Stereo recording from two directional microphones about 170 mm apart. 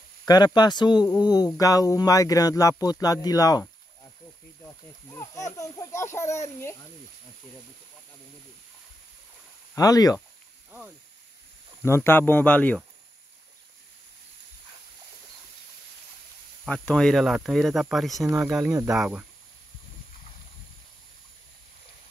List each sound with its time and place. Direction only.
0.2 s speech: 25° left (ahead or behind)
5.0 s speech: 20° left (ahead or behind)
9.8 s speech: 20° left (ahead or behind)
11.8 s speech: 15° left (ahead or behind)
16.6 s speech: 5° left (ahead or behind)
18.2 s speech: 15° right (ahead or behind)
18.9 s speech: 10° right (ahead or behind)